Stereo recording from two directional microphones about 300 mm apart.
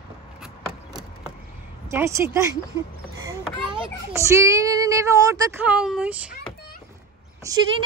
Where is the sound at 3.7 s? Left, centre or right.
Centre.